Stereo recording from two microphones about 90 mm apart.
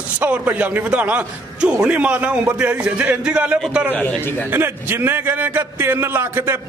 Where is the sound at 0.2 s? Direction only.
15° right (ahead or behind).